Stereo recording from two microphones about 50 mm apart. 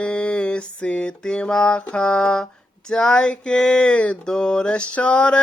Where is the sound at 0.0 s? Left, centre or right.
Left.